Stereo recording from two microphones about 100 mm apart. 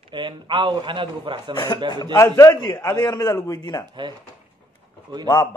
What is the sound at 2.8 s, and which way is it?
A man's voice, 45° left (ahead or behind).